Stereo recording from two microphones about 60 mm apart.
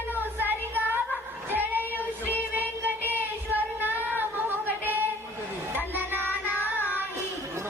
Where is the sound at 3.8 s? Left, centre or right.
Right.